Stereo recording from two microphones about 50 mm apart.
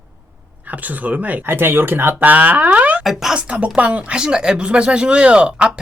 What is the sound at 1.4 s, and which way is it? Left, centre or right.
Speech, right.